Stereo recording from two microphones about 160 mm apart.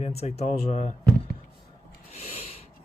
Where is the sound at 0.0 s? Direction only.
40° left (ahead or behind).